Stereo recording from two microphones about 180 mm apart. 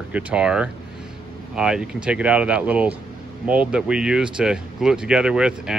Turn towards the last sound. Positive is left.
turn(degrees=-5)  # may be behind; listen again after turning